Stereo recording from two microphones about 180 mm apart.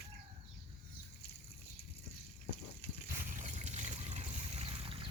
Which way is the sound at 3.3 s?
45° right (ahead or behind).